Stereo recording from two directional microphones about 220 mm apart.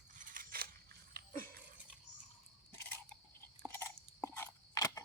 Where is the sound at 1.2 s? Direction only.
45° right (ahead or behind).